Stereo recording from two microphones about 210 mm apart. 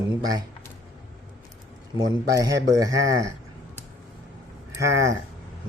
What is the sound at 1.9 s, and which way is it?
A man's voice, 15° right (ahead or behind).